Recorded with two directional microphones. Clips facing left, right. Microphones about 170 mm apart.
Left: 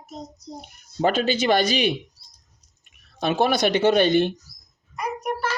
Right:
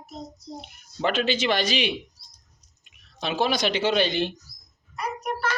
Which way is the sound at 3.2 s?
50° left (ahead or behind).